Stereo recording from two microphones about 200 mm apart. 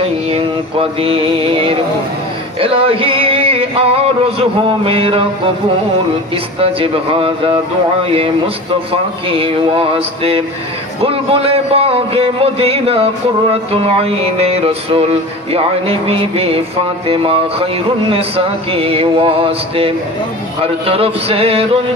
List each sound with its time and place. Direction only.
0.3 s speech: 30° right (ahead or behind)
2.6 s music: 25° right (ahead or behind)
6.6 s speech: 25° right (ahead or behind)